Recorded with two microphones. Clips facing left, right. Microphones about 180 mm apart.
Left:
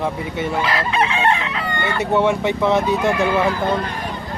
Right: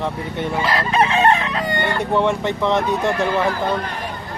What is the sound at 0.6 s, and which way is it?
Chicken, 40° right (ahead or behind).